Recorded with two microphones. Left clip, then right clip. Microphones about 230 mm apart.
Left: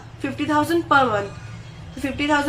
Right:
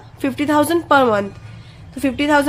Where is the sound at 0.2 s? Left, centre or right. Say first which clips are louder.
Right 5 dB; right.